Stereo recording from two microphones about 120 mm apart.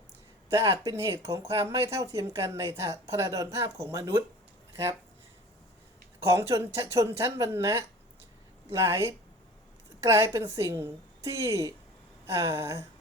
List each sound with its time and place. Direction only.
0.5 s speech: 30° right (ahead or behind)
6.2 s speech: 25° right (ahead or behind)